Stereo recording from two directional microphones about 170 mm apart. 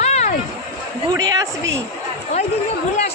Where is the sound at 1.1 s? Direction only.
20° right (ahead or behind).